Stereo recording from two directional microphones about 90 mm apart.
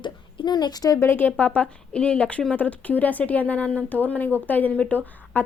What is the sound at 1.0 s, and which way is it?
A woman's voice, 25° left (ahead or behind).